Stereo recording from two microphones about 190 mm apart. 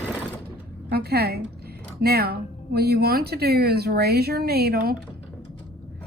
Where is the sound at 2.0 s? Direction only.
55° right (ahead or behind).